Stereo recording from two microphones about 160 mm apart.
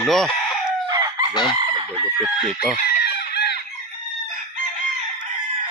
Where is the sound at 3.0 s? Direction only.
90° left.